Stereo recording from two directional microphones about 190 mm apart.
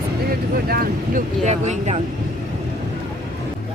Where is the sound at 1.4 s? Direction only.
35° right (ahead or behind).